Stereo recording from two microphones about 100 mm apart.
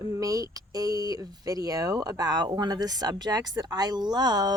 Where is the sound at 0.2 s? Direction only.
35° right (ahead or behind).